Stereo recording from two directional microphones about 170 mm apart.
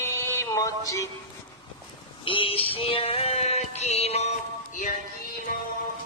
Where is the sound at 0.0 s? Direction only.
15° left (ahead or behind).